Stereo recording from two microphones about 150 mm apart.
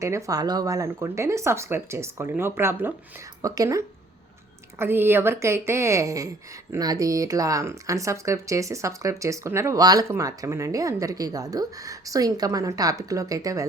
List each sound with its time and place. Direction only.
0.0 s speech: 20° right (ahead or behind)